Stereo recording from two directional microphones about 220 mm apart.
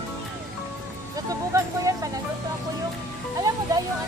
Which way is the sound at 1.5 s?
15° right (ahead or behind).